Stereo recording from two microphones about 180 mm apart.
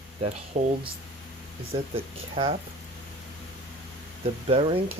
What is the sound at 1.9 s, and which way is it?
Speech, 30° right (ahead or behind).